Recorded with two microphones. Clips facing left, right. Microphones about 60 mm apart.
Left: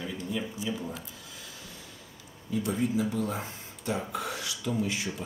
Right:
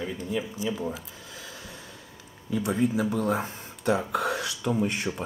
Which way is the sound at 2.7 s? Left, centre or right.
Right.